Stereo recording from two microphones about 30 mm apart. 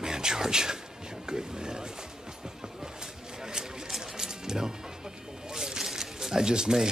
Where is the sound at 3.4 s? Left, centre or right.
Right.